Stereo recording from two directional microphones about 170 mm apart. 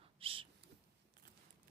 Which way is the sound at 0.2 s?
30° right (ahead or behind).